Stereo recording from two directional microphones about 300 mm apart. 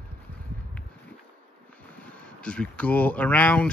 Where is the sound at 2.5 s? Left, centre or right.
Centre.